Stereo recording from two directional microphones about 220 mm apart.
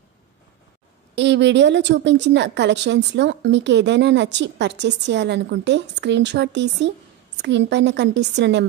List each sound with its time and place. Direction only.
1.1 s a woman's voice: 55° right (ahead or behind)